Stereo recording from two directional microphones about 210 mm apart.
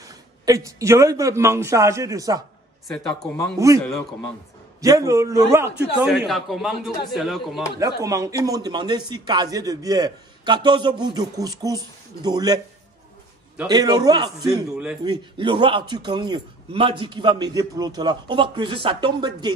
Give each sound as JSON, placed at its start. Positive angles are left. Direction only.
{"t": 0.0, "sound": "a man's voice", "side_deg": -15}
{"t": 2.9, "sound": "a man's voice", "side_deg": 0}
{"t": 3.5, "sound": "a man's voice", "side_deg": -15}
{"t": 4.8, "sound": "a man's voice", "side_deg": -15}
{"t": 6.0, "sound": "a man's voice", "side_deg": 0}
{"t": 7.8, "sound": "a man's voice", "side_deg": -15}
{"t": 13.7, "sound": "a man's voice", "side_deg": -20}